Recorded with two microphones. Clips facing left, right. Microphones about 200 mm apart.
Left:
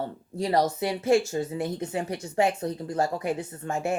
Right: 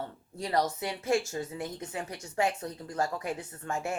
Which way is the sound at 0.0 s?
30° left (ahead or behind).